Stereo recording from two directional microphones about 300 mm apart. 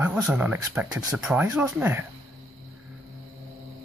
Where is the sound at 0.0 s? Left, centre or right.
Centre.